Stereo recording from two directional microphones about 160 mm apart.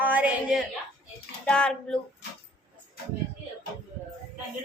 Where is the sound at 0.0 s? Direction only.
10° right (ahead or behind).